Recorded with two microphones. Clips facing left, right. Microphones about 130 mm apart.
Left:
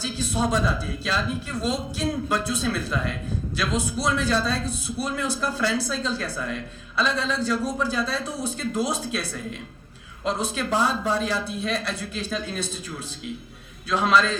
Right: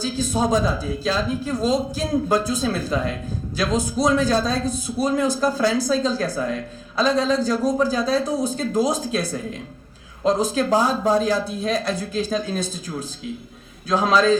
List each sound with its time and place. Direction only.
0.0 s speech: 40° right (ahead or behind)
13.8 s speech: 40° right (ahead or behind)